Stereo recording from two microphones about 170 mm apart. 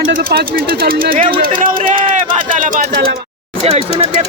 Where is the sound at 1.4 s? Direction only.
55° right (ahead or behind).